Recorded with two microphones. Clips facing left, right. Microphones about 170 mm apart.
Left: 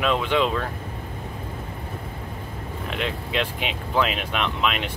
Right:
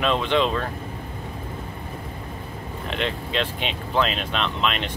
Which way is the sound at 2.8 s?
5° left (ahead or behind).